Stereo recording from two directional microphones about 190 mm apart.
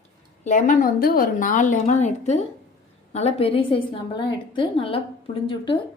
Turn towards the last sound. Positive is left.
turn(degrees=30)  # may be behind; listen again after turning